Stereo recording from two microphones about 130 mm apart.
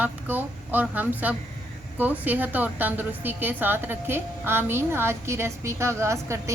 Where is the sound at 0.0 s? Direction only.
15° right (ahead or behind).